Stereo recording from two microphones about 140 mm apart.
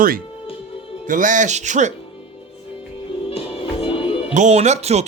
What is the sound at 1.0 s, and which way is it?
Speech, 70° right (ahead or behind).